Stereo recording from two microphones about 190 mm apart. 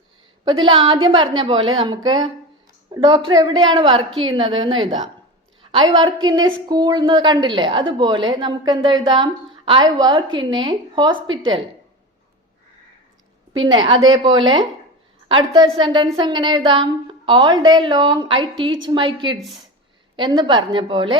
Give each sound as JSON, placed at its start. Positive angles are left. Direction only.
{"t": 0.4, "sound": "a woman's voice", "side_deg": -25}
{"t": 13.6, "sound": "a woman's voice", "side_deg": -25}
{"t": 19.4, "sound": "speech", "side_deg": 0}
{"t": 20.1, "sound": "a woman's voice", "side_deg": -25}